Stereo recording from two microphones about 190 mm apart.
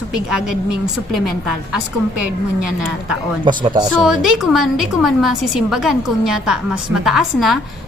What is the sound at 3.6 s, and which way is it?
Speech, 25° right (ahead or behind).